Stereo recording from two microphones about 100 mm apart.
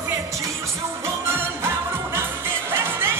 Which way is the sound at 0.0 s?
35° right (ahead or behind).